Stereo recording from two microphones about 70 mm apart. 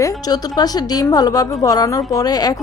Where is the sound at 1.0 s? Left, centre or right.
Left.